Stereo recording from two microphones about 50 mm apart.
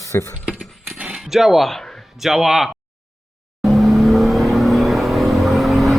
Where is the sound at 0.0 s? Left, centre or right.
Left.